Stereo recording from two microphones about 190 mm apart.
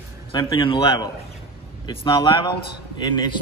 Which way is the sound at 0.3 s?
25° left (ahead or behind).